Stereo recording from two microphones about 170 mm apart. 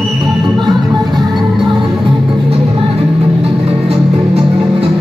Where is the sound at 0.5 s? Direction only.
25° right (ahead or behind).